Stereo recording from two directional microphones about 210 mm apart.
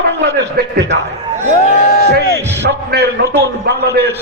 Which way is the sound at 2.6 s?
50° right (ahead or behind).